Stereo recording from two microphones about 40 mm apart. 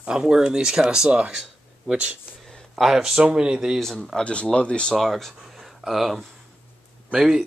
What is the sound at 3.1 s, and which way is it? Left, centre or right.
Speech, centre.